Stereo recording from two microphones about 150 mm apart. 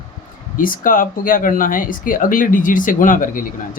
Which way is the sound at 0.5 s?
65° left (ahead or behind).